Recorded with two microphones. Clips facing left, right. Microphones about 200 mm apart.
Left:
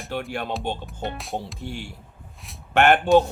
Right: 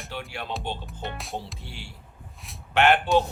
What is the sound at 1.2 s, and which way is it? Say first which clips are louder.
Music: left 4 dB; centre (ahead or behind).